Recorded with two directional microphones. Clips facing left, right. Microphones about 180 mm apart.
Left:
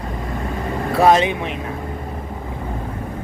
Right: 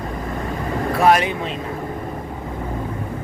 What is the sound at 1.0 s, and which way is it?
Speech, 20° left (ahead or behind).